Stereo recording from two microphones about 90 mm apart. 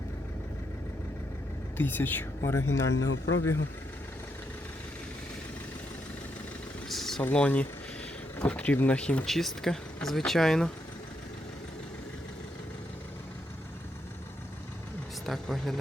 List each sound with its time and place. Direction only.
1.8 s a woman's voice: 20° left (ahead or behind)
2.4 s a man's voice: 35° left (ahead or behind)
6.8 s engine: centre (ahead or behind)
7.2 s speech: 15° left (ahead or behind)
15.3 s speech: 5° left (ahead or behind)